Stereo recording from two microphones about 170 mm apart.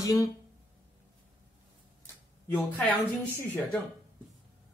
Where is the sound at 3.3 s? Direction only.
15° left (ahead or behind).